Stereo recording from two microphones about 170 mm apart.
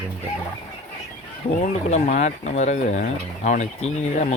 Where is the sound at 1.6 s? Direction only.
45° left (ahead or behind).